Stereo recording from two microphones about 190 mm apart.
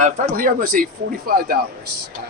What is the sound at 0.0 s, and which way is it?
A man's voice, 45° right (ahead or behind).